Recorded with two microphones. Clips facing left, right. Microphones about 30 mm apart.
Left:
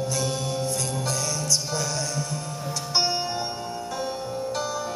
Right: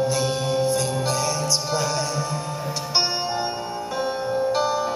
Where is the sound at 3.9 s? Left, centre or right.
Right.